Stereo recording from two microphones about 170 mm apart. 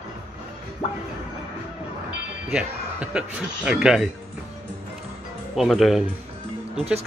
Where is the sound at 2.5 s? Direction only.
5° right (ahead or behind).